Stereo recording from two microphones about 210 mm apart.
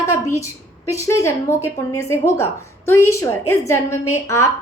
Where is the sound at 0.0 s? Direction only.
15° left (ahead or behind).